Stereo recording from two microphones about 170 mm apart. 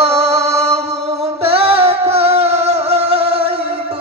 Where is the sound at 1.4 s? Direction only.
35° right (ahead or behind).